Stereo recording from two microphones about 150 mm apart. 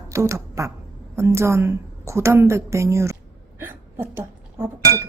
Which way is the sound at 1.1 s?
20° right (ahead or behind).